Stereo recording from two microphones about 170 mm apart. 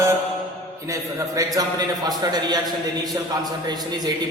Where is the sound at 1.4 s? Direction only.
20° right (ahead or behind).